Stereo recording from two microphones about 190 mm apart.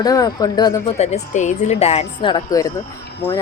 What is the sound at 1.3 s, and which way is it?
Speech, 40° left (ahead or behind).